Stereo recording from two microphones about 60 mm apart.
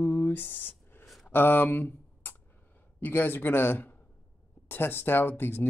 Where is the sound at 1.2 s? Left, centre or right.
Left.